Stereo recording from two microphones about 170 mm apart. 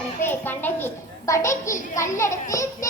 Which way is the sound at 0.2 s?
10° left (ahead or behind).